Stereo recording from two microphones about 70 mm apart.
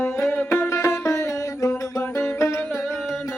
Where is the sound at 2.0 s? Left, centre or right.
Left.